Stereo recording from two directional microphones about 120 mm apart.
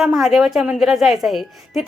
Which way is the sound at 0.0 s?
Centre (ahead or behind).